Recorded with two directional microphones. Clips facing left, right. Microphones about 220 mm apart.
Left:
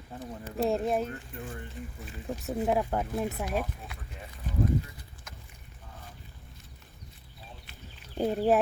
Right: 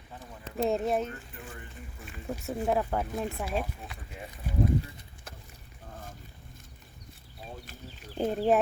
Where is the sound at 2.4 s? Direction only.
5° left (ahead or behind).